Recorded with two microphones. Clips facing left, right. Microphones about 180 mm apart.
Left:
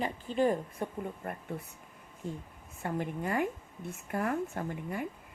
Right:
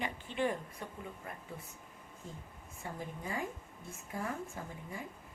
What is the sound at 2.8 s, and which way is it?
A woman's voice, 70° left (ahead or behind).